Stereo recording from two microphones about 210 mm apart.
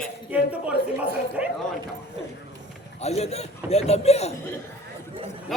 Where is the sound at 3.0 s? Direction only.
30° left (ahead or behind).